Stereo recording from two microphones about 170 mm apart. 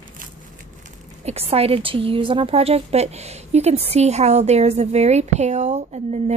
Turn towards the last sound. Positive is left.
turn(degrees=-40)  # may be behind; listen again after turning